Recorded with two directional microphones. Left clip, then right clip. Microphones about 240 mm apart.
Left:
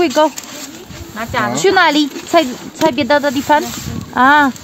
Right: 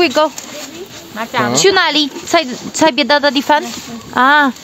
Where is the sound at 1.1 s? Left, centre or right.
Right.